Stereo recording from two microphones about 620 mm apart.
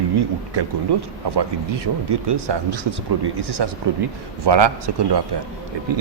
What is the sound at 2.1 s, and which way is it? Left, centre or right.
A man's voice, right.